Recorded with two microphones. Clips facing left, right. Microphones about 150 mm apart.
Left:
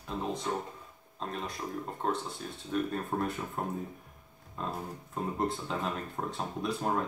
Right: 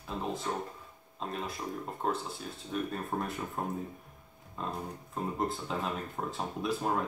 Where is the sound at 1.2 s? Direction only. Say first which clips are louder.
Even; 5° right (ahead or behind).